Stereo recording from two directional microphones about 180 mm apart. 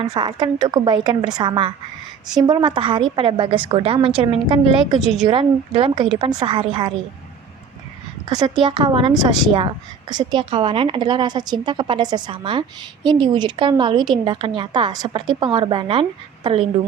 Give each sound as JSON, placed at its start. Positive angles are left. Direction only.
{"t": 0.0, "sound": "a woman's voice", "side_deg": -25}
{"t": 4.9, "sound": "a woman's voice", "side_deg": 0}
{"t": 5.2, "sound": "a woman's voice", "side_deg": -30}
{"t": 8.3, "sound": "a woman's voice", "side_deg": -20}